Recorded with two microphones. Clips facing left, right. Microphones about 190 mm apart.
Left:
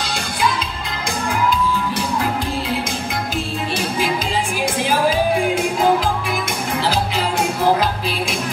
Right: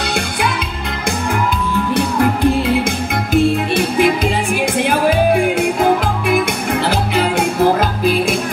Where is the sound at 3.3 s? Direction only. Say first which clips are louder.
Right 13 dB; 60° right (ahead or behind).